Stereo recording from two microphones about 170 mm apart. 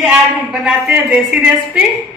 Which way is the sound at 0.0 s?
Centre (ahead or behind).